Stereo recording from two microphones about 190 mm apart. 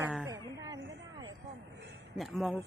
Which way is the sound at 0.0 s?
5° right (ahead or behind).